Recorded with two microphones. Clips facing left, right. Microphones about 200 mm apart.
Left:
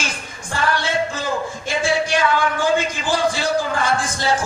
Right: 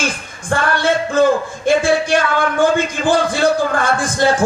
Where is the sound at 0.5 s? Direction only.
55° right (ahead or behind).